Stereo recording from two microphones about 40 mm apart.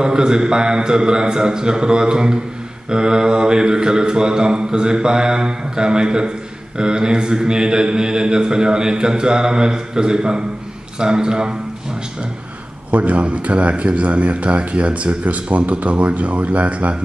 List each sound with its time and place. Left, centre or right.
0.0 s mantra: right
12.9 s a man's voice: right